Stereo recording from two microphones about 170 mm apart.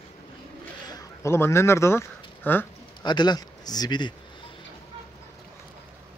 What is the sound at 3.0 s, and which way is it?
A man's voice, 25° left (ahead or behind).